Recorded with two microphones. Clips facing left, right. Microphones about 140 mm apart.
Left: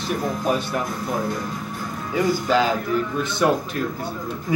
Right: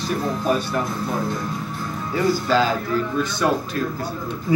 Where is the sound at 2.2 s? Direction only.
15° left (ahead or behind).